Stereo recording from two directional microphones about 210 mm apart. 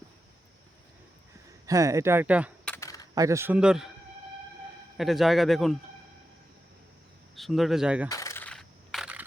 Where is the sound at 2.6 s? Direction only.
10° left (ahead or behind).